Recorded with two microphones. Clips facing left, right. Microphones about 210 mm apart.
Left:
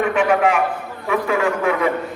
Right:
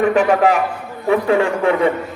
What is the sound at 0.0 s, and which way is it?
A man's voice, 40° right (ahead or behind).